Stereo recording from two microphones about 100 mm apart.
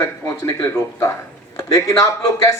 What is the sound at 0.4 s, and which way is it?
A man's voice, 25° left (ahead or behind).